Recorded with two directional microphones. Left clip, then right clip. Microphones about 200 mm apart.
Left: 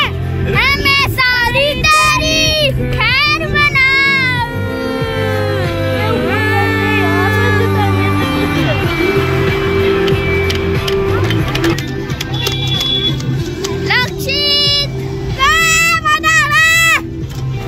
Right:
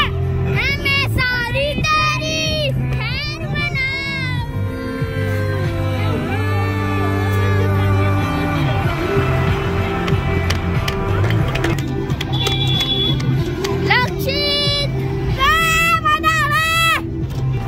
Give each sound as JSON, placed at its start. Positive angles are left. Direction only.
{"t": 0.6, "sound": "child singing", "side_deg": -5}
{"t": 6.2, "sound": "music", "side_deg": -5}
{"t": 13.8, "sound": "music", "side_deg": -10}
{"t": 15.4, "sound": "child singing", "side_deg": 5}